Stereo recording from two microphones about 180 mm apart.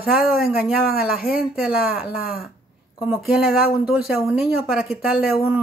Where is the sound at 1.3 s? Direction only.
5° right (ahead or behind).